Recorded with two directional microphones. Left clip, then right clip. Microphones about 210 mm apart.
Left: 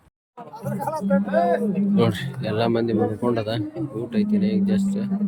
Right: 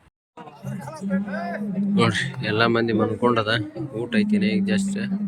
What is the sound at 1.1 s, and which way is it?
Speech, 35° left (ahead or behind).